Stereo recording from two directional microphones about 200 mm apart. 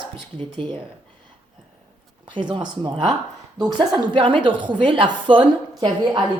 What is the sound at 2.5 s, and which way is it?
A woman's voice, 25° right (ahead or behind).